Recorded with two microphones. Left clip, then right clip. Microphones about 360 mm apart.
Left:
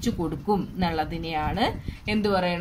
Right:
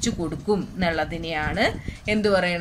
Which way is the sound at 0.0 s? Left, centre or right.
Centre.